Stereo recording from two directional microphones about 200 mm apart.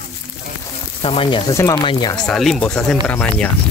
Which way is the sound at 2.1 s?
5° left (ahead or behind).